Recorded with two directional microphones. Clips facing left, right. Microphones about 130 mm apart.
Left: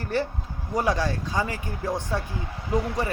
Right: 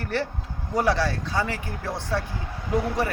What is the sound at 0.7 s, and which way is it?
Speech, 15° left (ahead or behind).